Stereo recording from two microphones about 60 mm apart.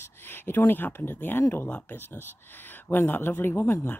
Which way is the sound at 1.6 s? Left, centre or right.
Left.